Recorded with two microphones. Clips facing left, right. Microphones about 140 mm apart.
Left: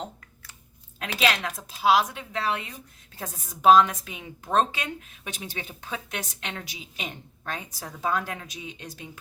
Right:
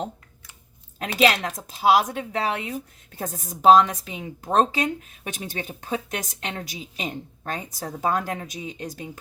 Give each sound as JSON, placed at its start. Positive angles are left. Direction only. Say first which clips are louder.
{"t": 1.0, "sound": "speech", "louder": "right 5 dB", "side_deg": -45}